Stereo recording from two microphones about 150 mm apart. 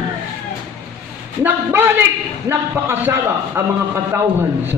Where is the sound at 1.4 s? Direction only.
15° right (ahead or behind).